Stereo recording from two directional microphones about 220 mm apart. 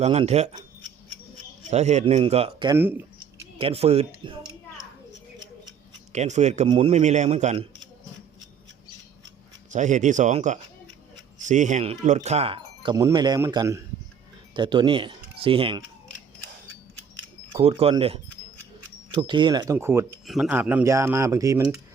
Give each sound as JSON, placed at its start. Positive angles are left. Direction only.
{"t": 0.0, "sound": "speech", "side_deg": -30}
{"t": 1.7, "sound": "speech", "side_deg": -30}
{"t": 2.7, "sound": "speech", "side_deg": -10}
{"t": 3.6, "sound": "speech", "side_deg": -25}
{"t": 6.1, "sound": "a man's voice", "side_deg": -30}
{"t": 9.7, "sound": "a man's voice", "side_deg": -35}
{"t": 17.5, "sound": "speech", "side_deg": -25}